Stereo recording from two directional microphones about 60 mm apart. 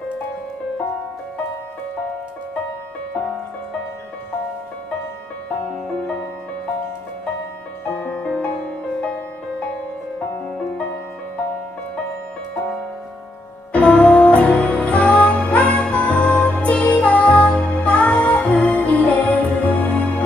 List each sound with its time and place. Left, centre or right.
7.9 s music: left
8.4 s music: centre
13.7 s music: left